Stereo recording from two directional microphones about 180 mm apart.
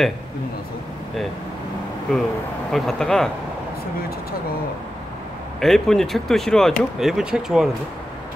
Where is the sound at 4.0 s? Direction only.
55° left (ahead or behind).